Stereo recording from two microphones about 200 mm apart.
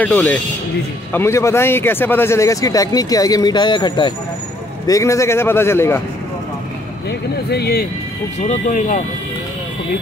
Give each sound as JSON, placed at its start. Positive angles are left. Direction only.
{"t": 0.0, "sound": "speech", "side_deg": 10}
{"t": 7.1, "sound": "speech", "side_deg": 55}
{"t": 8.4, "sound": "speech", "side_deg": 40}